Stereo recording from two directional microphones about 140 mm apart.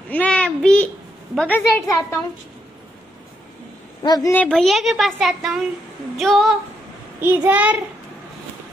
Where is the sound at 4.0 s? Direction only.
30° left (ahead or behind).